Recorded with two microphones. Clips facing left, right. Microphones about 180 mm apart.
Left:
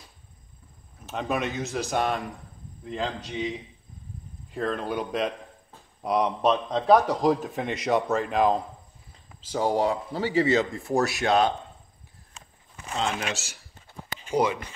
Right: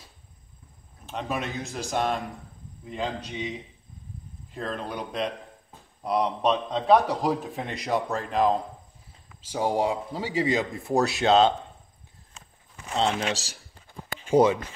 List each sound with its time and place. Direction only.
1.0 s a man's voice: centre (ahead or behind)
4.6 s a man's voice: centre (ahead or behind)
9.4 s speech: 10° right (ahead or behind)
12.9 s speech: 30° right (ahead or behind)